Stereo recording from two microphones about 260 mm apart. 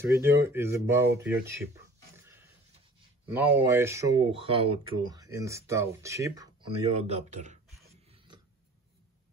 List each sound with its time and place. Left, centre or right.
0.0 s speech: centre
2.1 s a sound: centre
3.3 s speech: centre; by 7.5 s right